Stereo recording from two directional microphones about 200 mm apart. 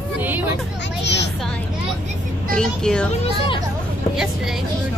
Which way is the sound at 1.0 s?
60° left (ahead or behind).